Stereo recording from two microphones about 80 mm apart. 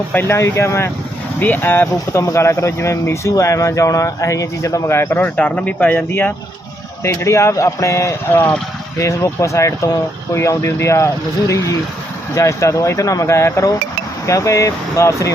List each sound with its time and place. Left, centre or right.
0.1 s speech: left
1.4 s speech: left
7.0 s speech: left